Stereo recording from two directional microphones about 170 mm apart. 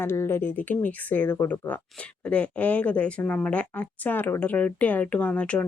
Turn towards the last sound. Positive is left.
turn(degrees=5)  # may be behind; listen again after turning